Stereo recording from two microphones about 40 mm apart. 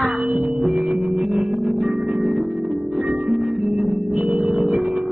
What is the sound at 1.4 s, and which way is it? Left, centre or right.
Organ, centre.